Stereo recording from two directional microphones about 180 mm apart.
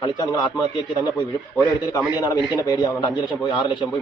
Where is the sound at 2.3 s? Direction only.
25° left (ahead or behind).